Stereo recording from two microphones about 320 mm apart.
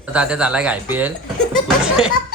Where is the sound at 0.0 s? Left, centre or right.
Centre.